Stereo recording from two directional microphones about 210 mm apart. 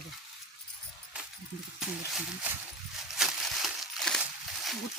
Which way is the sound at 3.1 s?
Centre (ahead or behind).